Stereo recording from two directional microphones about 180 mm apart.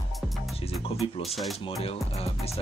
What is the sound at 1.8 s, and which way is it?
Speech, 35° left (ahead or behind).